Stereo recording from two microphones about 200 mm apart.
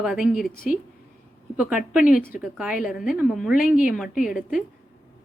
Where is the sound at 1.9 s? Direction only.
5° right (ahead or behind).